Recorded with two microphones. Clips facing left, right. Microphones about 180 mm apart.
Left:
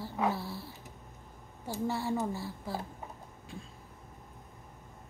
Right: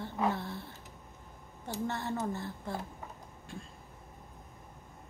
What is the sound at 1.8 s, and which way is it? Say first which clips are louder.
Speech: left 3 dB; 10° left (ahead or behind).